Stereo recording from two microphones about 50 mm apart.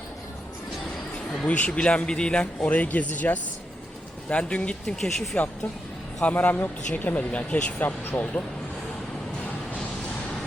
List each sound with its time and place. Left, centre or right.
1.5 s speech: left
2.6 s speech: left
4.9 s speech: centre
6.2 s speech: left
7.3 s speech: left